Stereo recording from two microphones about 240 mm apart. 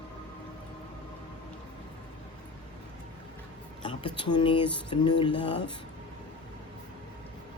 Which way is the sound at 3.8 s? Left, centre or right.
Centre.